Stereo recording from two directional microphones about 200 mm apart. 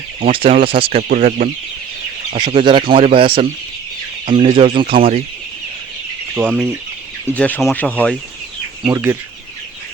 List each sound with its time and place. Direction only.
0.3 s speech: 25° right (ahead or behind)
1.0 s speech: 45° right (ahead or behind)
2.3 s speech: 25° right (ahead or behind)
6.3 s speech: 5° right (ahead or behind)
7.3 s speech: 5° left (ahead or behind)
8.8 s speech: 15° right (ahead or behind)